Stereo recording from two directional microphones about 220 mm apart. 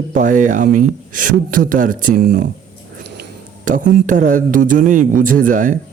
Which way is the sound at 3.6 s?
35° right (ahead or behind).